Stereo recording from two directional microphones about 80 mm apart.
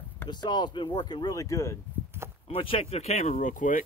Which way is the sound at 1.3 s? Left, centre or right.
Left.